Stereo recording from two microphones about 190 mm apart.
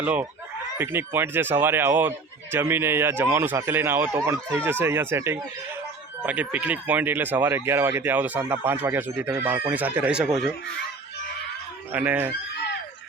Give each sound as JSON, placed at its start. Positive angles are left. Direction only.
{"t": 0.0, "sound": "speech", "side_deg": -5}
{"t": 11.9, "sound": "speech", "side_deg": -10}